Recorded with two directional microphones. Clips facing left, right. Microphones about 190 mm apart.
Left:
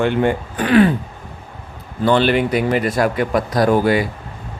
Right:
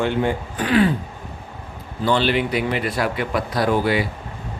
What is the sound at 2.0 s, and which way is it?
Speech, 55° left (ahead or behind).